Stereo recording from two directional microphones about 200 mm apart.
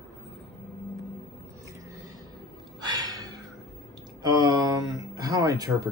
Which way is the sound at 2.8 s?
20° right (ahead or behind).